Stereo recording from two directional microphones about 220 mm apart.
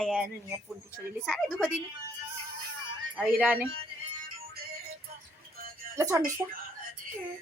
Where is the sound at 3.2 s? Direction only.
5° right (ahead or behind).